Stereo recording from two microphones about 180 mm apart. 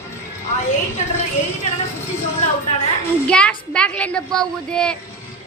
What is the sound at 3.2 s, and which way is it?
A woman's voice, 5° left (ahead or behind).